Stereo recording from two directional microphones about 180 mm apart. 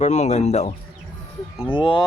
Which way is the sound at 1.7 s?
30° left (ahead or behind).